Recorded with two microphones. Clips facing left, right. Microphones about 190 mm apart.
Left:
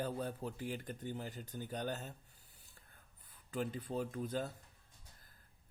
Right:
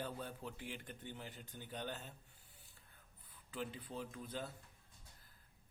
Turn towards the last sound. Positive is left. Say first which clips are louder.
# left 7 dB
turn(degrees=45)  # may be behind; listen again after turning